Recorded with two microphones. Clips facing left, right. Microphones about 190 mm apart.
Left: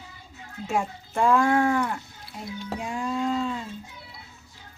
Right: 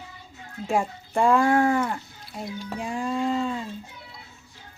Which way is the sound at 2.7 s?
Centre (ahead or behind).